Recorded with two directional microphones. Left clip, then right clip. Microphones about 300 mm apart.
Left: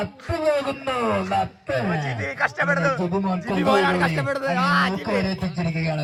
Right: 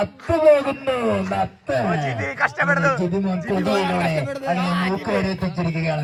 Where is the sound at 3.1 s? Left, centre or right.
Left.